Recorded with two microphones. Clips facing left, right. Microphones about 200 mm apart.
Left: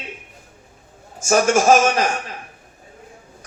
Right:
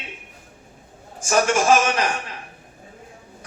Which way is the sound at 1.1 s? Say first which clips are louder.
Left 3 dB; 45° left (ahead or behind).